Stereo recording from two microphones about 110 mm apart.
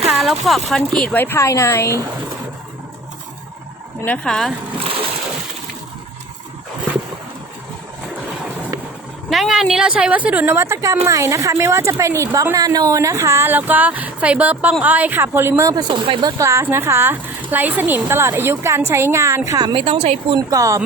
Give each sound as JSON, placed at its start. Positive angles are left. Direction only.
{"t": 0.1, "sound": "speech", "side_deg": 0}
{"t": 1.1, "sound": "a woman's voice", "side_deg": 20}
{"t": 4.0, "sound": "speech", "side_deg": 10}
{"t": 9.3, "sound": "a woman's voice", "side_deg": -5}
{"t": 15.7, "sound": "a woman's voice", "side_deg": -40}
{"t": 16.2, "sound": "a woman's voice", "side_deg": -25}
{"t": 19.5, "sound": "a woman's voice", "side_deg": -35}
{"t": 19.7, "sound": "speech", "side_deg": -60}
{"t": 20.3, "sound": "a woman's voice", "side_deg": -30}